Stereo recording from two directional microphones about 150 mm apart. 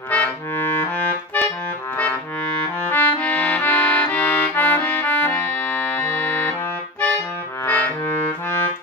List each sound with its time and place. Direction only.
0.1 s accordion: 10° left (ahead or behind)
2.6 s accordion: 10° left (ahead or behind)
7.6 s music: 10° left (ahead or behind)